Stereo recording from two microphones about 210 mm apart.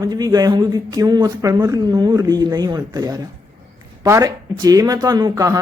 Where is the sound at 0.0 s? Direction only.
15° right (ahead or behind).